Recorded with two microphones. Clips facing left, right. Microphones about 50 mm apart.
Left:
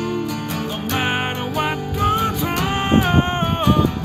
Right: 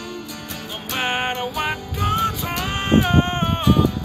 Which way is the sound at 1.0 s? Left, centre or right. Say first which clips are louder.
Right 1 dB; centre.